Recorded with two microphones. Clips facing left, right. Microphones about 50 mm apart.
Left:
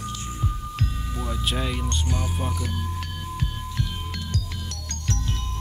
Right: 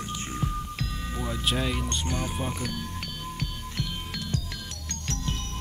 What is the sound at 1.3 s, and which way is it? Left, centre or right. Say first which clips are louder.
Speech: even; centre.